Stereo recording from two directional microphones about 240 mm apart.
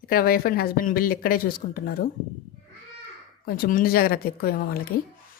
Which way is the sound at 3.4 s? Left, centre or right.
Left.